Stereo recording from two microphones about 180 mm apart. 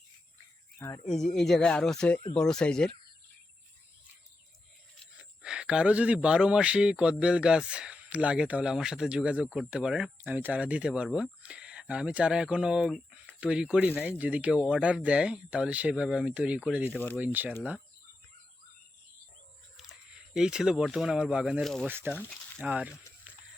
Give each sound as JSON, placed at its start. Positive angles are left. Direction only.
{"t": 0.8, "sound": "speech", "side_deg": 20}
{"t": 1.4, "sound": "speech", "side_deg": 5}
{"t": 5.4, "sound": "speech", "side_deg": -5}
{"t": 19.7, "sound": "speech", "side_deg": -5}
{"t": 21.8, "sound": "speech", "side_deg": -10}